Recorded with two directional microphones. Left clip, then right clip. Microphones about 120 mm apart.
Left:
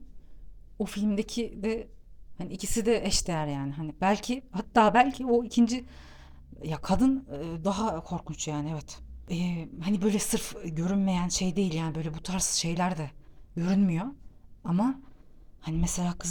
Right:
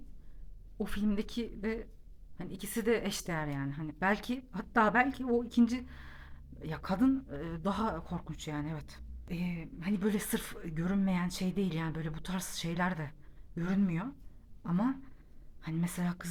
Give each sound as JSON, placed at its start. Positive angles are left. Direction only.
{"t": 0.8, "sound": "a woman's voice", "side_deg": 25}
{"t": 7.1, "sound": "speech", "side_deg": 20}
{"t": 9.3, "sound": "a woman's voice", "side_deg": 45}
{"t": 10.0, "sound": "speech", "side_deg": 25}
{"t": 13.6, "sound": "a woman's voice", "side_deg": 40}
{"t": 15.7, "sound": "speech", "side_deg": 25}